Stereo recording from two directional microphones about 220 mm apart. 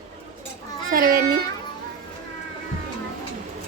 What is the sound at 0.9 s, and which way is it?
Speech, 40° right (ahead or behind).